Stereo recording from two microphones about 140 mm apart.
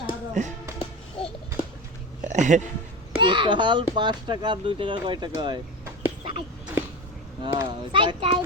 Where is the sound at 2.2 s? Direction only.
60° right (ahead or behind).